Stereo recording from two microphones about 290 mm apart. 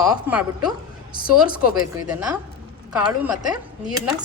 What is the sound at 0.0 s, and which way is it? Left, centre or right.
Speech, centre.